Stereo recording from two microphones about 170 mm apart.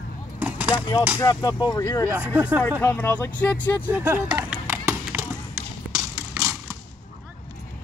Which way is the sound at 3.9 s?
10° right (ahead or behind).